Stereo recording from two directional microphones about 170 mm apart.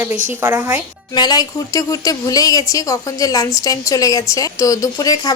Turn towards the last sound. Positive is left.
turn(degrees=20)  # may be behind; listen again after turning